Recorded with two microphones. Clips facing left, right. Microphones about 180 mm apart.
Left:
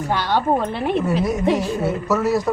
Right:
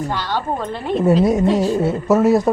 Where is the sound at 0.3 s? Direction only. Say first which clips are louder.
Left 3 dB; 10° left (ahead or behind).